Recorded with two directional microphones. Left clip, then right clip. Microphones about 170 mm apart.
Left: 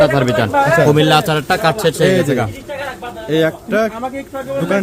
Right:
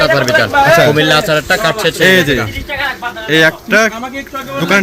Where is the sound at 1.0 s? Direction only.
80° left.